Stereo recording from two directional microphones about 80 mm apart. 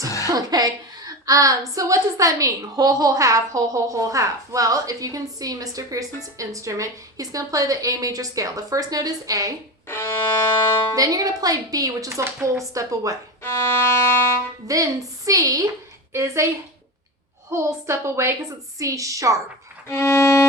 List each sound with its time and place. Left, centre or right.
0.3 s a woman's voice: right
9.8 s music: left
10.9 s a woman's voice: right
13.4 s violin: left
14.7 s a woman's voice: right
17.5 s a woman's voice: right
19.9 s violin: left